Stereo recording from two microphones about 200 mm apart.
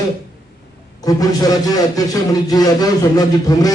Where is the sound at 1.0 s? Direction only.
20° left (ahead or behind).